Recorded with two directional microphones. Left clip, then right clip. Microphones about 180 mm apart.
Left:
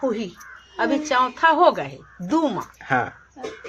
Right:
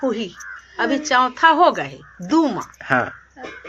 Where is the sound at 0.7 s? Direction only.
40° right (ahead or behind).